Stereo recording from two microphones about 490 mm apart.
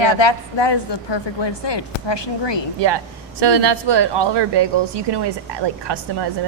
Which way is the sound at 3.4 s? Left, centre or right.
Right.